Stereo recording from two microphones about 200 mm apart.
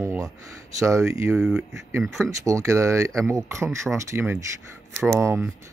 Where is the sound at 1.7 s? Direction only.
15° right (ahead or behind).